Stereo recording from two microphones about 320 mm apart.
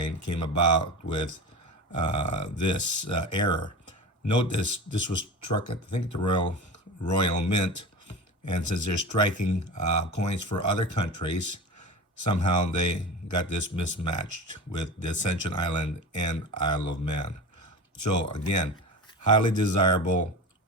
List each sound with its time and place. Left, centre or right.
0.0 s a man's voice: left
1.9 s a man's voice: left
3.4 s speech: centre
3.8 s a man's voice: left